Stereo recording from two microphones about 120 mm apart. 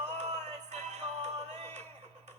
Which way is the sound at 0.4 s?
75° right (ahead or behind).